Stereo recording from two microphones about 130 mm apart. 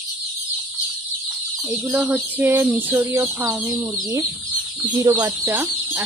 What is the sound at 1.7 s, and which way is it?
Speech, 10° right (ahead or behind).